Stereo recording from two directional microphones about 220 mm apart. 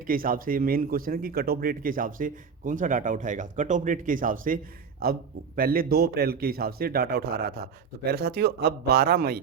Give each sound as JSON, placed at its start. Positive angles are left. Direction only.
{"t": 0.1, "sound": "a man's voice", "side_deg": -40}